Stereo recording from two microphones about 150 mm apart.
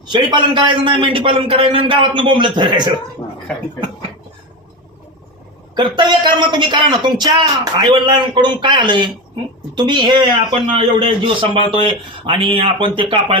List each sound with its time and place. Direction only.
0.1 s a man's voice: 30° right (ahead or behind)
5.7 s a man's voice: 30° right (ahead or behind)